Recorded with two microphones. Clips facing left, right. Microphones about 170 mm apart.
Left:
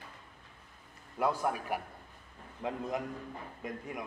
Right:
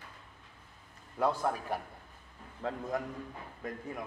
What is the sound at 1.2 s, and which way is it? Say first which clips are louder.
Speech: right 1 dB; 10° left (ahead or behind).